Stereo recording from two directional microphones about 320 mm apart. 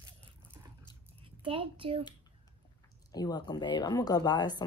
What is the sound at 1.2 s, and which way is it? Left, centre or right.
Speech, centre.